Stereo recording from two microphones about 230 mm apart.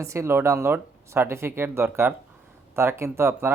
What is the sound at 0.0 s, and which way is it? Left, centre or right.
Speech, centre.